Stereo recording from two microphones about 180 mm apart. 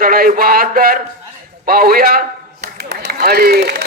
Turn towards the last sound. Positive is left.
turn(degrees=-60)  # may be behind; listen again after turning